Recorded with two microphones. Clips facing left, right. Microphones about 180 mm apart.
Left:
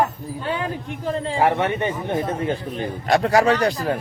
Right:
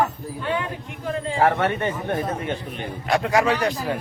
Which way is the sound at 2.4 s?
35° left (ahead or behind).